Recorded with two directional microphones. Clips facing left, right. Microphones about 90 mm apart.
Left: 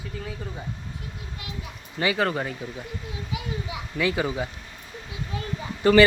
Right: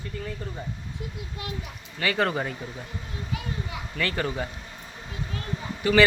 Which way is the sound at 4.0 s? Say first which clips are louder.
Left 3 dB; 10° left (ahead or behind).